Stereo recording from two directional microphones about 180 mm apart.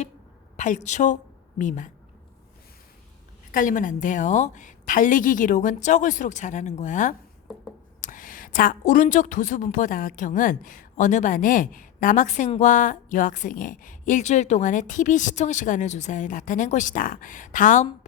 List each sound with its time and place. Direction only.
0.5 s a woman's voice: 45° left (ahead or behind)
3.5 s a woman's voice: 50° left (ahead or behind)